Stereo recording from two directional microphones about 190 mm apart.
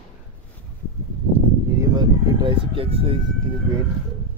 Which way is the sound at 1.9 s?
25° right (ahead or behind).